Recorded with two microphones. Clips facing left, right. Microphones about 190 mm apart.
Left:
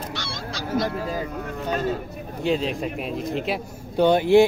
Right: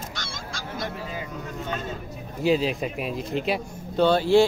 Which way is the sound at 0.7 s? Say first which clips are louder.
Left 8 dB; 40° left (ahead or behind).